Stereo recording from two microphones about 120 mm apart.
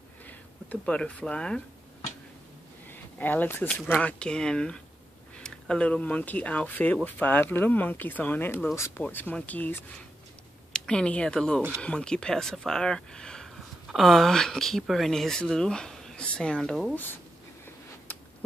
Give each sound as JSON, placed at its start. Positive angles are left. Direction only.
{"t": 0.3, "sound": "speech", "side_deg": 10}
{"t": 2.9, "sound": "speech", "side_deg": 15}
{"t": 9.0, "sound": "speech", "side_deg": 15}